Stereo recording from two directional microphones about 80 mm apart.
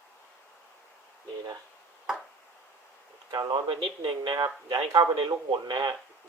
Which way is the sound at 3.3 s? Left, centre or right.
Right.